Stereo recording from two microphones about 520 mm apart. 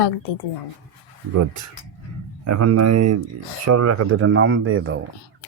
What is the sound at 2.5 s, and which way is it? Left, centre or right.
Speech, right.